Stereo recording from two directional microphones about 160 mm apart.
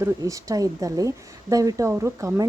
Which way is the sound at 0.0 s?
20° right (ahead or behind).